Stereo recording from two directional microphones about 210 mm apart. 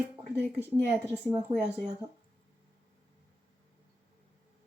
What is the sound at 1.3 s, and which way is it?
Speech, 20° right (ahead or behind).